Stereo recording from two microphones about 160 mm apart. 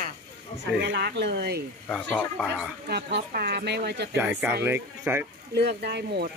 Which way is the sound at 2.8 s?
80° right.